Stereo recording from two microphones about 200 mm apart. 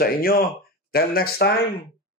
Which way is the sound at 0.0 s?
50° left (ahead or behind).